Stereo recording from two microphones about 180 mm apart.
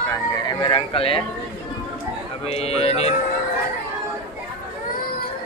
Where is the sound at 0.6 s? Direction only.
30° left (ahead or behind).